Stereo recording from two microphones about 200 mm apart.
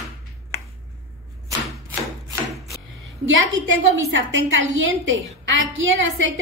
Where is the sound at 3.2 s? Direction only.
70° right (ahead or behind).